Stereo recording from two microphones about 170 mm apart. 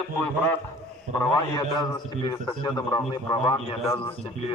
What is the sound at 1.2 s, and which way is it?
A man's voice, 20° left (ahead or behind).